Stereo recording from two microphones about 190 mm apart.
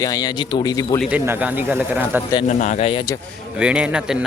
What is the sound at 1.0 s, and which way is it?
Speech, 10° right (ahead or behind).